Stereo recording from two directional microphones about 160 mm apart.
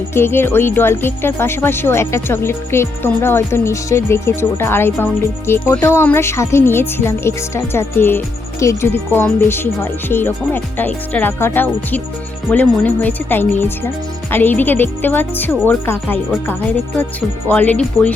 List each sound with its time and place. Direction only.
0.1 s speech: 15° left (ahead or behind)